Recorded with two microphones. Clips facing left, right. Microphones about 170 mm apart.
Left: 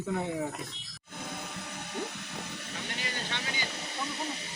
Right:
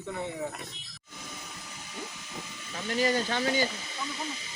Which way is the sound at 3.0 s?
40° right (ahead or behind).